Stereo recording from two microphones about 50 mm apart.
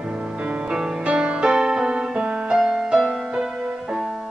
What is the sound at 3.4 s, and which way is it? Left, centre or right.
Music, centre.